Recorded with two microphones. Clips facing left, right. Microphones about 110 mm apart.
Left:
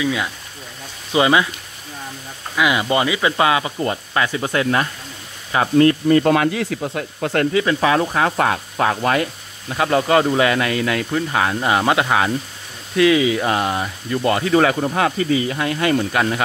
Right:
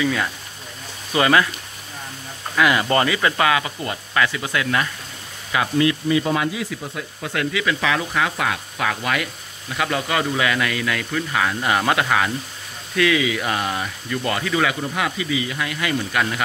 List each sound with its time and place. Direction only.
0.0 s speech: 10° left (ahead or behind)
2.5 s speech: 10° left (ahead or behind); by 7.4 s 55° left (ahead or behind)
7.5 s speech: 35° left (ahead or behind)